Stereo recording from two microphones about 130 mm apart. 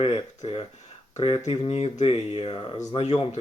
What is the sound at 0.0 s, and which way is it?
Speech, 45° left (ahead or behind).